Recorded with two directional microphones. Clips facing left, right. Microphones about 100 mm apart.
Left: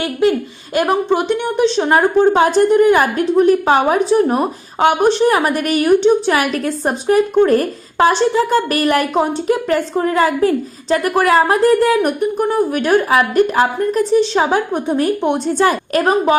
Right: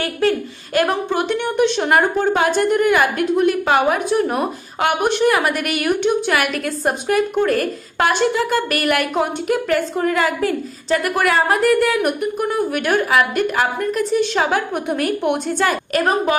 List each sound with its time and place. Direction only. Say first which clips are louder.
0.0 s a woman's voice: left 3 dB; 15° left (ahead or behind)
1.8 s a woman's voice: left 4 dB; 30° left (ahead or behind)